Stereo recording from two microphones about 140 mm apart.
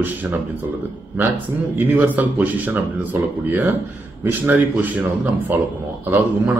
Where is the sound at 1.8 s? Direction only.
15° right (ahead or behind).